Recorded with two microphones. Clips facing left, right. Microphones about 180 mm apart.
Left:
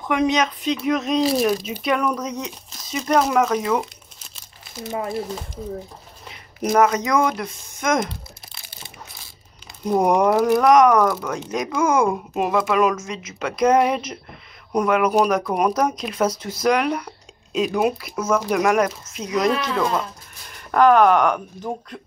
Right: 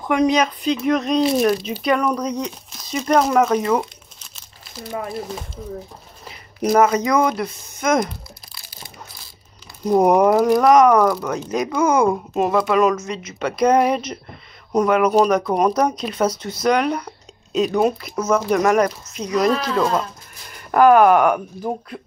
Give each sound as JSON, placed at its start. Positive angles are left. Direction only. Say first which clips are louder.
{"t": 0.0, "sound": "speech", "louder": "right 3 dB", "side_deg": 0}
{"t": 6.2, "sound": "speech", "louder": "right 3 dB", "side_deg": -5}
{"t": 8.0, "sound": "crumpling", "louder": "right 2 dB", "side_deg": 25}
{"t": 9.8, "sound": "speech", "louder": "right 3 dB", "side_deg": -5}